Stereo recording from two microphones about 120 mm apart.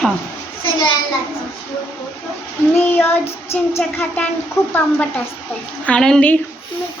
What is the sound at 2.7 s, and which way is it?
Speech, 15° left (ahead or behind).